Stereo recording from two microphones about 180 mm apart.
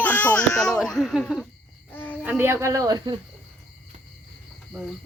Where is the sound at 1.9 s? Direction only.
10° left (ahead or behind).